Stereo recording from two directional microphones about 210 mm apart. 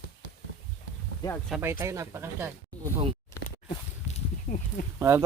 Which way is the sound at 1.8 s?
15° right (ahead or behind).